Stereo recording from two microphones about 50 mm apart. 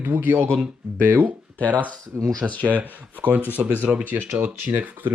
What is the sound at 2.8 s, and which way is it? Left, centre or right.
Speech, right.